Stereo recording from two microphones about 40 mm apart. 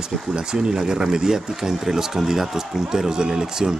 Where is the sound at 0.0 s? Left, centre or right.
Centre.